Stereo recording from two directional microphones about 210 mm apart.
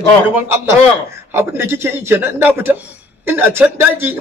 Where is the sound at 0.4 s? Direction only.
10° right (ahead or behind).